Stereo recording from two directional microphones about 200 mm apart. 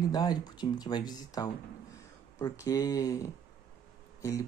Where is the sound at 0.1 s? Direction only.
20° left (ahead or behind).